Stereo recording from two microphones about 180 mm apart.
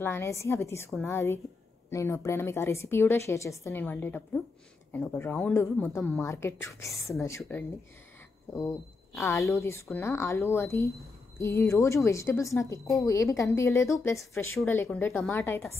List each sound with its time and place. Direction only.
0.0 s a woman's voice: 15° left (ahead or behind)